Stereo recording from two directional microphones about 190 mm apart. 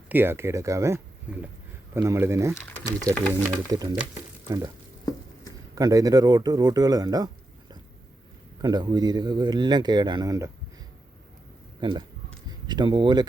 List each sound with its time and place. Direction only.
0.1 s speech: 10° right (ahead or behind)
5.7 s speech: 15° right (ahead or behind)
8.6 s speech: 25° right (ahead or behind)
11.8 s speech: 25° right (ahead or behind)